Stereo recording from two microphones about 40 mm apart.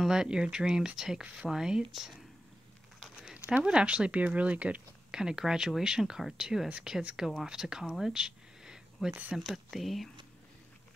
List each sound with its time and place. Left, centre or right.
0.1 s speech: right
3.0 s a sound: centre
3.5 s speech: right
5.1 s speech: centre
8.0 s a sound: centre
9.4 s speech: centre